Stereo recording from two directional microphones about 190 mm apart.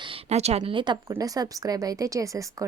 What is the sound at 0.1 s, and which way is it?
A woman's voice, 35° right (ahead or behind).